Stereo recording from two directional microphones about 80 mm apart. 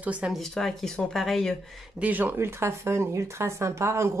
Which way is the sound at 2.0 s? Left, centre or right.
Right.